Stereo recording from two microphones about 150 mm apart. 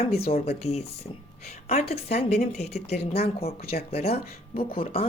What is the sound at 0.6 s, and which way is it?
Speech, 45° left (ahead or behind).